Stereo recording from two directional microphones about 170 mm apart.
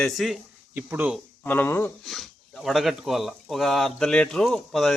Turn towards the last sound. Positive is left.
turn(degrees=0)  # may be behind; listen again after turning